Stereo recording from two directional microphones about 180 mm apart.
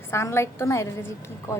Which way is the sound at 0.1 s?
15° left (ahead or behind).